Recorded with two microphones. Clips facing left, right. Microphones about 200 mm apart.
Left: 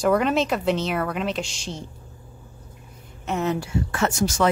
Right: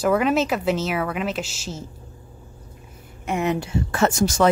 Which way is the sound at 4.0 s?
45° right (ahead or behind).